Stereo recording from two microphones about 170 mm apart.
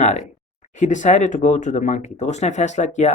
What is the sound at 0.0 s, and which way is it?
Speech, 40° left (ahead or behind).